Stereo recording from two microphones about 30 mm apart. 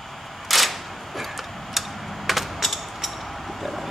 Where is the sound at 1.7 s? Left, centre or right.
Centre.